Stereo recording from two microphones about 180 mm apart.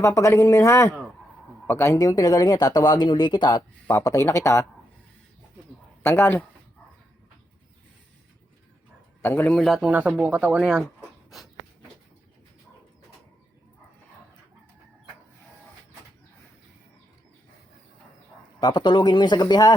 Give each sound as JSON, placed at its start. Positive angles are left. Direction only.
{"t": 0.0, "sound": "speech", "side_deg": 15}
{"t": 6.0, "sound": "speech", "side_deg": 10}
{"t": 9.2, "sound": "a man's voice", "side_deg": 10}
{"t": 18.6, "sound": "speech", "side_deg": 25}